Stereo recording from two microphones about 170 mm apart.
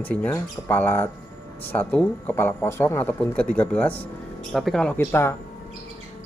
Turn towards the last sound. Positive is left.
turn(degrees=15)  # may be behind; listen again after turning